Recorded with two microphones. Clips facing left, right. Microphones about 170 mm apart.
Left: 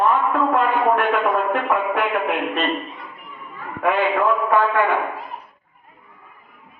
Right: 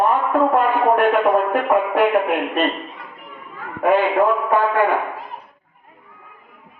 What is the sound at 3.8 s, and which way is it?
A man's voice, 40° right (ahead or behind).